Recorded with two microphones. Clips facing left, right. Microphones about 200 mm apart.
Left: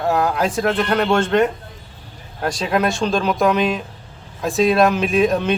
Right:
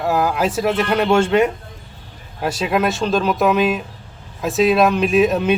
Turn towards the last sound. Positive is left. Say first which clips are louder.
# right 2 dB
turn(degrees=-5)  # may be behind; listen again after turning